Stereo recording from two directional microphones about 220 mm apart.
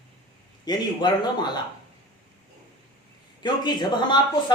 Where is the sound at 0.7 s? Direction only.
20° left (ahead or behind).